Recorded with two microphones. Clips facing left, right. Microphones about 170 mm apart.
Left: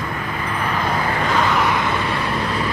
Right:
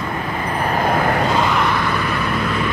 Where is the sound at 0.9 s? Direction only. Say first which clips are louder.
Right 6 dB; 50° right (ahead or behind).